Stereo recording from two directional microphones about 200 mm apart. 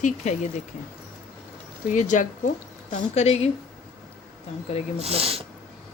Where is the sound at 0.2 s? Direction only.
35° left (ahead or behind).